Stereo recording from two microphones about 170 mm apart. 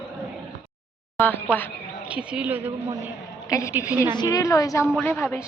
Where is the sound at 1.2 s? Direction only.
10° left (ahead or behind).